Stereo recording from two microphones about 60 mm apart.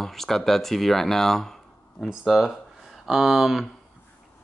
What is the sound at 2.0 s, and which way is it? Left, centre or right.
Speech, centre.